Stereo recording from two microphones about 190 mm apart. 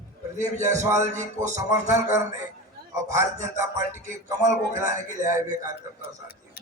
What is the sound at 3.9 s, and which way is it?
Music, 40° right (ahead or behind).